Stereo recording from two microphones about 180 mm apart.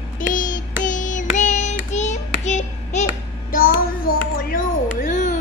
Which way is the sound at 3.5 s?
55° left (ahead or behind).